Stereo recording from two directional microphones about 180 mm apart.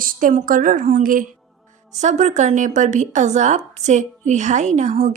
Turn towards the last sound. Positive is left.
turn(degrees=-40)  # may be behind; listen again after turning